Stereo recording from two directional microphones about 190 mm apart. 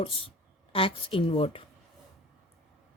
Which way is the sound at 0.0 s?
30° left (ahead or behind).